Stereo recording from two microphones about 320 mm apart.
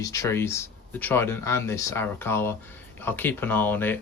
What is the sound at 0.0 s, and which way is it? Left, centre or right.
Speech, centre.